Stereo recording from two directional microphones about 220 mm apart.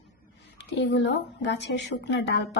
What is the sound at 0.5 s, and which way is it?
A woman's voice, 55° left (ahead or behind).